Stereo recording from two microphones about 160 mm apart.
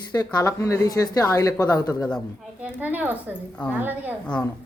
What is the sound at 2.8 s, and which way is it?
A woman's voice, 10° right (ahead or behind).